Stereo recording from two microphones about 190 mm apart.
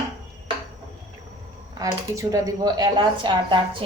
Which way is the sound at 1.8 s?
15° right (ahead or behind).